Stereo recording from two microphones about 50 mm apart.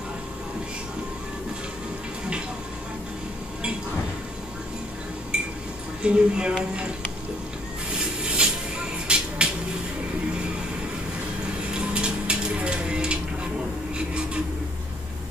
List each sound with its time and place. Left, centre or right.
6.0 s speech: centre
8.0 s music: centre
11.7 s a sound: centre